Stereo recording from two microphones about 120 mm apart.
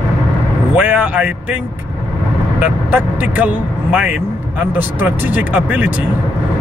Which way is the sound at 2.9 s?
15° right (ahead or behind).